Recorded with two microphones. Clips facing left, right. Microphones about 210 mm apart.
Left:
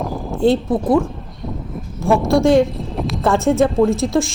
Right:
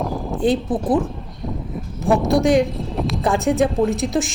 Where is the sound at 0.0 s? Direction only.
Centre (ahead or behind).